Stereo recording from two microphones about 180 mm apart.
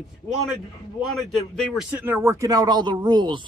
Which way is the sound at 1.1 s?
Centre (ahead or behind).